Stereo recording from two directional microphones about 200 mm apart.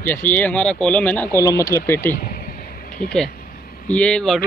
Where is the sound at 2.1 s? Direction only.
50° left (ahead or behind).